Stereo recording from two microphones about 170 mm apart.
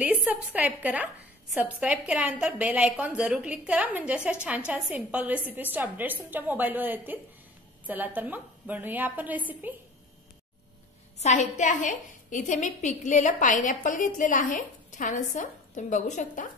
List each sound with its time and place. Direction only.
0.0 s a woman's voice: 10° right (ahead or behind)
11.1 s a woman's voice: 45° left (ahead or behind)